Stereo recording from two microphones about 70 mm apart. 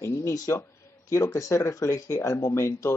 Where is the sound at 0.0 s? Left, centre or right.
Left.